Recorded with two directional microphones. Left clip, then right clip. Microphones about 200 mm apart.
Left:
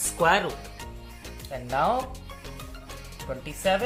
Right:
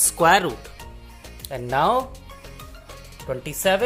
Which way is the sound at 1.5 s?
55° right (ahead or behind).